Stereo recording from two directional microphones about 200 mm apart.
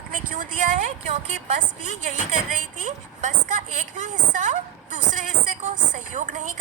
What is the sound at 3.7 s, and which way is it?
A woman's voice, 40° right (ahead or behind).